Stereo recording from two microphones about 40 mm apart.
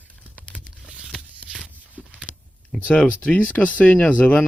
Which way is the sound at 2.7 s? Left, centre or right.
Left.